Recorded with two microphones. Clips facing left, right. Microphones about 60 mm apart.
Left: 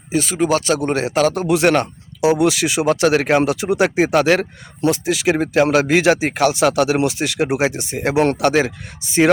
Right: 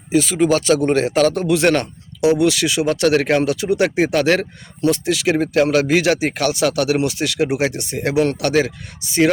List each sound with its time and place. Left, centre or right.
0.1 s speech: centre
8.1 s speech: left
8.4 s speech: left